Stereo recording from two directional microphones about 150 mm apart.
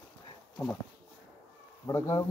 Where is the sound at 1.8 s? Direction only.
20° left (ahead or behind).